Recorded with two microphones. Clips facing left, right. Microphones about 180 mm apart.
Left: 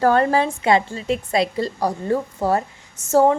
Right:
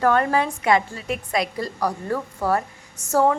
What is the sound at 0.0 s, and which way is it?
A woman's voice, 30° left (ahead or behind).